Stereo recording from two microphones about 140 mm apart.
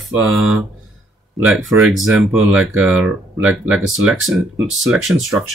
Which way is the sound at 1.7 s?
5° right (ahead or behind).